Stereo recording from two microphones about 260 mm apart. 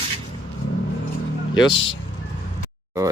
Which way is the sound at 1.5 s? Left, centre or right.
Centre.